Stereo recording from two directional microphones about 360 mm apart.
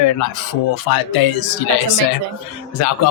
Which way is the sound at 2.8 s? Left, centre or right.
Left.